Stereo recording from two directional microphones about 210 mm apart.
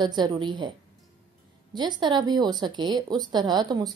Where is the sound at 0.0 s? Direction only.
20° right (ahead or behind).